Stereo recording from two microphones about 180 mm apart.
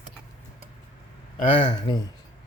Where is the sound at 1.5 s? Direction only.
25° left (ahead or behind).